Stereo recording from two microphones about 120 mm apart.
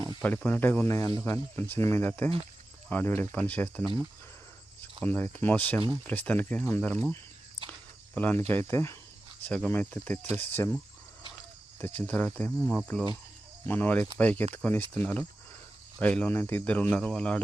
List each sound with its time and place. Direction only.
0.2 s speech: 10° left (ahead or behind)
5.0 s speech: 15° left (ahead or behind)
9.4 s speech: 10° left (ahead or behind)
11.8 s speech: 15° left (ahead or behind)
12.6 s cricket: centre (ahead or behind)
13.7 s speech: 15° left (ahead or behind)